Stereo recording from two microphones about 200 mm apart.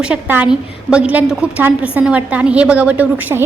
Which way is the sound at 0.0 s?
5° right (ahead or behind).